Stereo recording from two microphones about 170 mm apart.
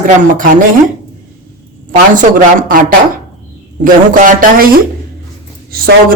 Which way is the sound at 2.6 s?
55° right (ahead or behind).